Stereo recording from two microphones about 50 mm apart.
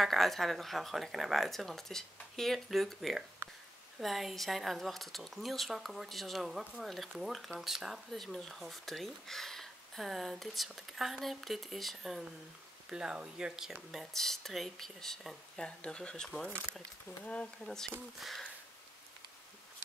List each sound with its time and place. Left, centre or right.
0.0 s speech: centre
12.9 s speech: centre
14.1 s speech: centre; by 17.5 s left
17.6 s speech: centre